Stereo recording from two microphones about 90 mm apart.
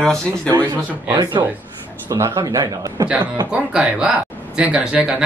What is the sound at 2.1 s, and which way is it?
Speech, 40° right (ahead or behind).